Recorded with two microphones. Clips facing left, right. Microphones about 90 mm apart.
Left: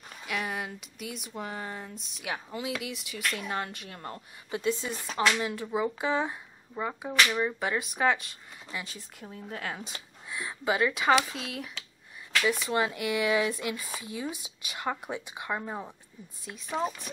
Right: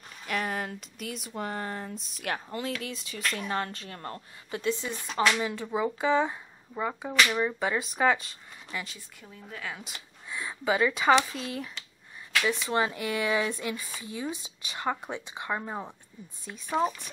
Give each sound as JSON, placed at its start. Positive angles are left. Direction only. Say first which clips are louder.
{"t": 0.3, "sound": "speech", "louder": "right 2 dB", "side_deg": 5}
{"t": 5.0, "sound": "speech", "louder": "right 1 dB", "side_deg": 0}
{"t": 8.8, "sound": "a woman's voice", "louder": "left 3 dB", "side_deg": 40}
{"t": 10.3, "sound": "speech", "louder": "right 1 dB", "side_deg": 5}
{"t": 12.4, "sound": "speech", "louder": "even", "side_deg": 5}
{"t": 15.5, "sound": "a woman's voice", "louder": "right 1 dB", "side_deg": -10}
{"t": 16.4, "sound": "speech", "louder": "even", "side_deg": 0}